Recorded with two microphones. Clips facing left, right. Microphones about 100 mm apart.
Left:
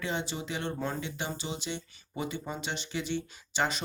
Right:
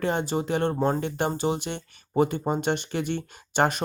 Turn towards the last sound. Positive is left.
turn(degrees=-55)  # may be behind; listen again after turning